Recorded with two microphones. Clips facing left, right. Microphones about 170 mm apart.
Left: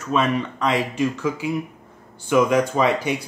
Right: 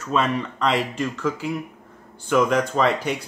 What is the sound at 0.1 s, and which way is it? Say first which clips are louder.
Speech: left 2 dB; 5° left (ahead or behind).